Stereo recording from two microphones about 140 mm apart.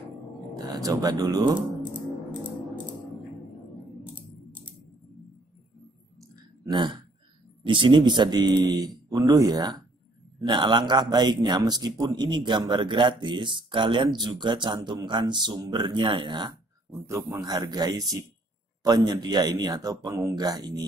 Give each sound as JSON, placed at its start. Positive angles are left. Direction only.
{"t": 0.6, "sound": "speech", "side_deg": -25}
{"t": 7.6, "sound": "speech", "side_deg": -35}
{"t": 17.0, "sound": "a man's voice", "side_deg": -20}